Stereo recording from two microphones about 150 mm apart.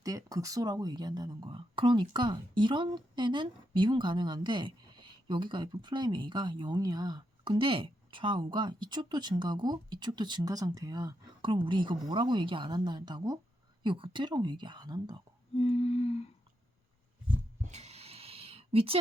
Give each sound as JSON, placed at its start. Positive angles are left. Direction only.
{"t": 0.0, "sound": "speech", "side_deg": -25}
{"t": 15.5, "sound": "humming", "side_deg": 45}
{"t": 17.7, "sound": "a sound", "side_deg": -50}